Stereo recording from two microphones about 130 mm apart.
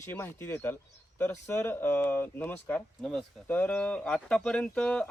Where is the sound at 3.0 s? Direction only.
Centre (ahead or behind).